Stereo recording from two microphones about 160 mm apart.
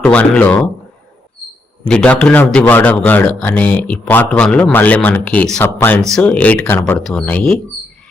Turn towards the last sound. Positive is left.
turn(degrees=5)  # may be behind; listen again after turning